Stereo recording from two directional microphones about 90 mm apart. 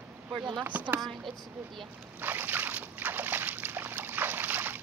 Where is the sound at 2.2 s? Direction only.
20° right (ahead or behind).